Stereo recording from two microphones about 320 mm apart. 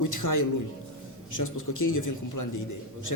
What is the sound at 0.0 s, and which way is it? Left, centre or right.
A man's voice, left.